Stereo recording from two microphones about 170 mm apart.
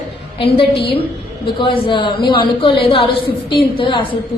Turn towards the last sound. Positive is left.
turn(degrees=30)  # may be behind; listen again after turning